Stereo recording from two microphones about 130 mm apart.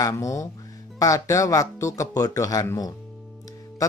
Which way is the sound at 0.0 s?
25° left (ahead or behind).